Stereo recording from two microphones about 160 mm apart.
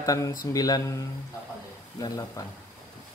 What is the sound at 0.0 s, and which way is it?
Speech, 20° left (ahead or behind).